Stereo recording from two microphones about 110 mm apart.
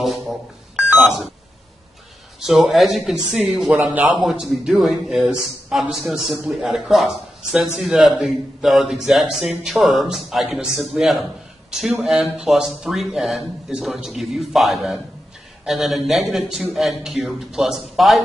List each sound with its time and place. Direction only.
0.0 s speech: centre (ahead or behind)
2.4 s speech: centre (ahead or behind)
3.7 s a man's voice: 15° right (ahead or behind)
4.2 s speech: centre (ahead or behind)